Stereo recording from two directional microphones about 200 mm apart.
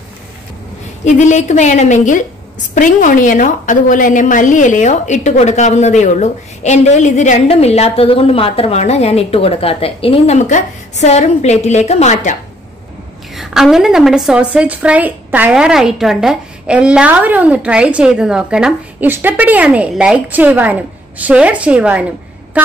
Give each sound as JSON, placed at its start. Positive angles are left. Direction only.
{"t": 1.0, "sound": "a woman's voice", "side_deg": 35}
{"t": 13.3, "sound": "a woman's voice", "side_deg": 0}